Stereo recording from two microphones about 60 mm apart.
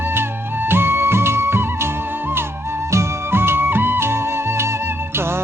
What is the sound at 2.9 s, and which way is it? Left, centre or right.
Music, right.